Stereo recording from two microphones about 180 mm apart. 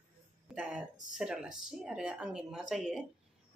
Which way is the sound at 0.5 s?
5° right (ahead or behind).